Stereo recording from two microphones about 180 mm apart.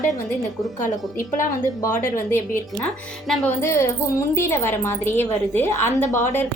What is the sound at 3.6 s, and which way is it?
Speech, 15° left (ahead or behind).